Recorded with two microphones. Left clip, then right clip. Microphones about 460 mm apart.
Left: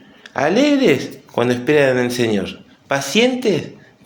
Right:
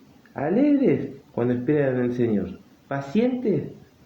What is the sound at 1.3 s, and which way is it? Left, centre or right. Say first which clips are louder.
Speech: left 8 dB; right.